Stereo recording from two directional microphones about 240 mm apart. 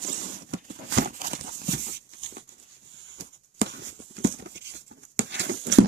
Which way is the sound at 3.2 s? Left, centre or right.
Right.